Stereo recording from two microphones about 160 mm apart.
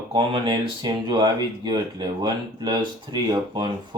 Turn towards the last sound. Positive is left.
turn(degrees=-30)  # may be behind; listen again after turning